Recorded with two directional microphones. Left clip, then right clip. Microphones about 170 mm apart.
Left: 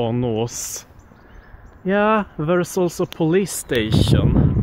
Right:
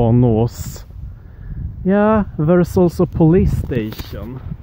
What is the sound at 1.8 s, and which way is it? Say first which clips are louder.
Speech: right 2 dB; 50° right (ahead or behind).